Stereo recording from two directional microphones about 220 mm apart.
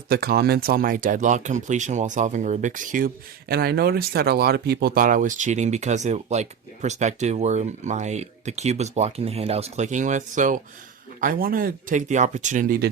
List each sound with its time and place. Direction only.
0.1 s speech: 45° right (ahead or behind)